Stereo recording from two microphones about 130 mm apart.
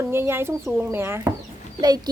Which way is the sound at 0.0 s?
20° right (ahead or behind).